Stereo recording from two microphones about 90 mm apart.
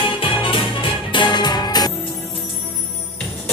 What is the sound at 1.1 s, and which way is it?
Music, 55° left (ahead or behind).